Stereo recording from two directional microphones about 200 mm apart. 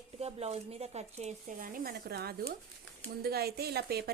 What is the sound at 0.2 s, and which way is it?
A woman's voice, 30° right (ahead or behind).